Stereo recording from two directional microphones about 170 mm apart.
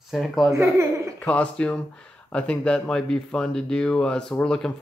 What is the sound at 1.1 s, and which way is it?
Speech, 10° left (ahead or behind).